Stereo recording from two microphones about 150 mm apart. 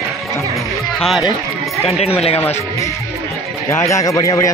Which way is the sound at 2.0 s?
40° left (ahead or behind).